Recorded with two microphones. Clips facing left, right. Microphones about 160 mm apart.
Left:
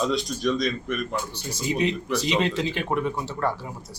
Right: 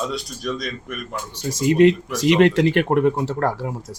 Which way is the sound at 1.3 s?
90° right.